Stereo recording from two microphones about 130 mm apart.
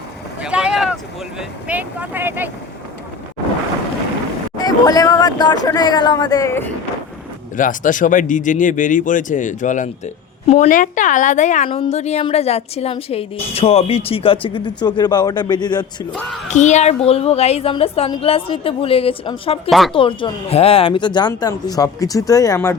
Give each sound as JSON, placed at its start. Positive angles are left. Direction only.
{"t": 0.4, "sound": "boat", "side_deg": -5}
{"t": 1.4, "sound": "speech", "side_deg": -10}
{"t": 4.5, "sound": "speech", "side_deg": 30}
{"t": 7.5, "sound": "speech", "side_deg": 90}
{"t": 10.4, "sound": "a woman's voice", "side_deg": 55}
{"t": 11.7, "sound": "a woman's voice", "side_deg": 50}
{"t": 16.5, "sound": "a woman's voice", "side_deg": 65}